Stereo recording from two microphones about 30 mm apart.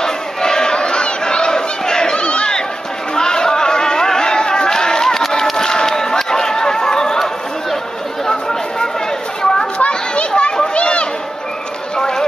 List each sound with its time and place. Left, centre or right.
0.0 s crowd: left
2.1 s crowd: left
3.2 s a sound: left
5.6 s crowd: left
8.3 s chatter: left
9.8 s a sound: left
12.0 s music: left